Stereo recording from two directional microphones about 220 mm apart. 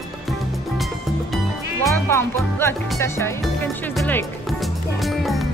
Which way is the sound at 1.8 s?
10° left (ahead or behind).